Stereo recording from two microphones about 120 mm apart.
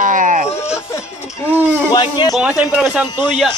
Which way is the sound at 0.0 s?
90° right.